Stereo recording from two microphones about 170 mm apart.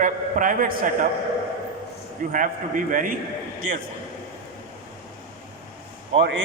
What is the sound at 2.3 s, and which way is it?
Speech, 50° right (ahead or behind).